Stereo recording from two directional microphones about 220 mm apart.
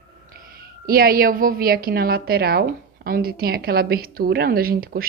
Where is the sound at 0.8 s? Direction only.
40° right (ahead or behind).